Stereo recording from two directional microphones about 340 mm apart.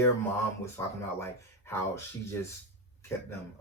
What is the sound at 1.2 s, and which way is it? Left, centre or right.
Speech, centre.